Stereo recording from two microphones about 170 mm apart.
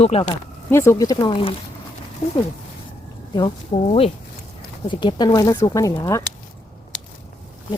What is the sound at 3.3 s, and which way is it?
Speech, 30° left (ahead or behind).